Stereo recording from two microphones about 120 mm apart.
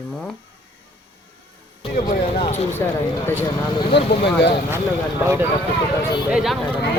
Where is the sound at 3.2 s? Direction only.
20° left (ahead or behind).